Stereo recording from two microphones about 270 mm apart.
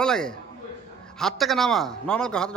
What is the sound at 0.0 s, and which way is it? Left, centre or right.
A man's voice, centre.